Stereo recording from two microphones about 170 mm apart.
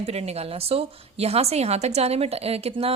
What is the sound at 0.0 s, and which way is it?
A woman's voice, 35° right (ahead or behind).